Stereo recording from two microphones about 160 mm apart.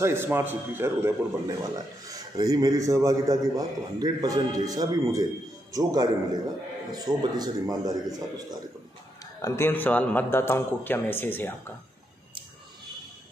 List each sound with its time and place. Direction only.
0.0 s a man's voice: 15° right (ahead or behind)
9.4 s speech: 15° left (ahead or behind)